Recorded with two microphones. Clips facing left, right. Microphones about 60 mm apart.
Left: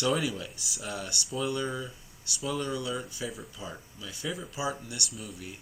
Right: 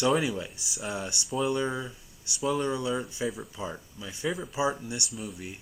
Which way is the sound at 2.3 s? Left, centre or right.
Centre.